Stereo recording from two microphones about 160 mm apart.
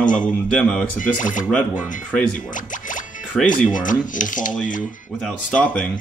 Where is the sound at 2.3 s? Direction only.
55° left (ahead or behind).